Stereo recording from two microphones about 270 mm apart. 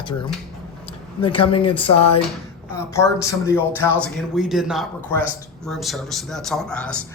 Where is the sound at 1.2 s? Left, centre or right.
Centre.